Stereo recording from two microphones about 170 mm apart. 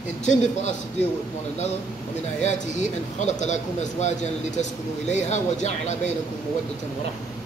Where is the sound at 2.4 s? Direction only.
45° left (ahead or behind).